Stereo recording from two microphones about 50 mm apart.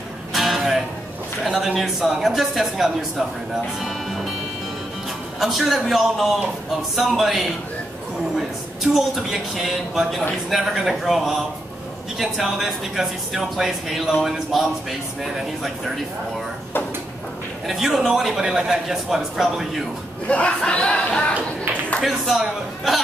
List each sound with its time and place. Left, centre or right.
0.3 s music: centre
1.4 s a man's voice: centre
3.8 s music: centre
5.4 s speech: centre
17.6 s a man's voice: centre
20.2 s speech: left
22.0 s speech: centre